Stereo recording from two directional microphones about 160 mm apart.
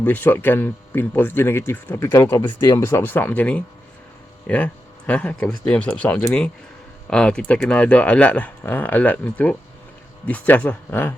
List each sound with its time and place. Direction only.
0.0 s speech: 10° left (ahead or behind)
2.4 s speech: 30° left (ahead or behind)
2.7 s speech: 15° left (ahead or behind)